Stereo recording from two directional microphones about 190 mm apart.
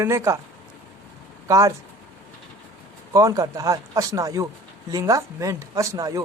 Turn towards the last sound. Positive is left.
turn(degrees=-20)  # may be behind; listen again after turning